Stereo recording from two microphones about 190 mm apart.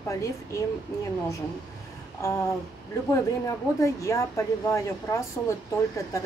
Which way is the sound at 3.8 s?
15° left (ahead or behind).